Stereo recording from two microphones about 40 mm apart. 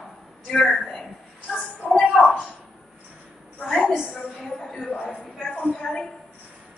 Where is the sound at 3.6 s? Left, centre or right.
Left.